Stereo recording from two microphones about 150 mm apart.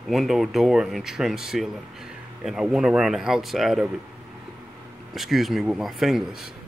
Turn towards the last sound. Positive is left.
turn(degrees=0)  # may be behind; listen again after turning